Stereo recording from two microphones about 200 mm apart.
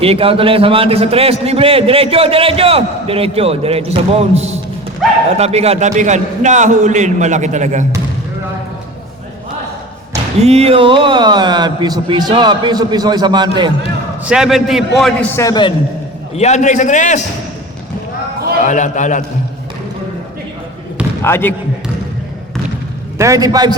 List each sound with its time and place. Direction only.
0.0 s a man's voice: 30° right (ahead or behind)
10.4 s a man's voice: 30° right (ahead or behind)
14.3 s a man's voice: 5° right (ahead or behind); by 15.7 s 20° left (ahead or behind)
16.3 s a man's voice: 35° left (ahead or behind)
18.6 s a man's voice: 40° left (ahead or behind)
21.2 s speech: 10° left (ahead or behind)
23.1 s a man's voice: 15° right (ahead or behind)